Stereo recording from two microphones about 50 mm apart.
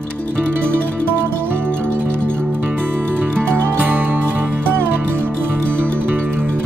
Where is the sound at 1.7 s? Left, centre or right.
Centre.